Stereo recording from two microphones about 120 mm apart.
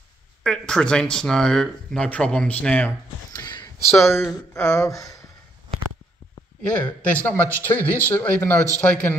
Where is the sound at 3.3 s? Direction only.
35° left (ahead or behind).